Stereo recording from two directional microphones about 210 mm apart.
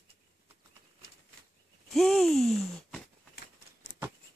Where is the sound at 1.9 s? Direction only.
Centre (ahead or behind).